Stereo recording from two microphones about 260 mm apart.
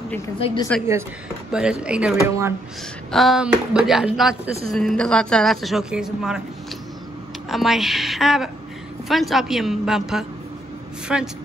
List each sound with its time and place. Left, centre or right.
0.9 s a woman's voice: centre
7.4 s a woman's voice: centre